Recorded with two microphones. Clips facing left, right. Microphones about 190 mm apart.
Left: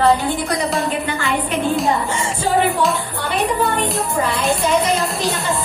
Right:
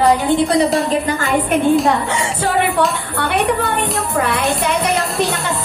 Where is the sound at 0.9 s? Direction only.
40° right (ahead or behind).